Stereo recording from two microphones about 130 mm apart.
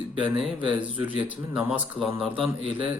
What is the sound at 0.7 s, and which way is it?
Speech, 10° right (ahead or behind).